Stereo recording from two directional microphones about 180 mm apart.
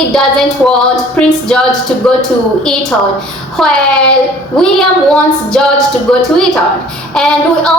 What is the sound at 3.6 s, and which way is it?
A woman's voice, centre (ahead or behind).